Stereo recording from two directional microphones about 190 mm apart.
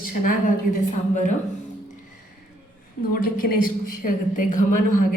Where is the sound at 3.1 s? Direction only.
50° left (ahead or behind).